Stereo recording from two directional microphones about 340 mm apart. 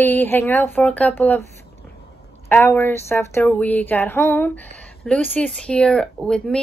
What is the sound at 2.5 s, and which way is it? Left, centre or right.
Speech, centre.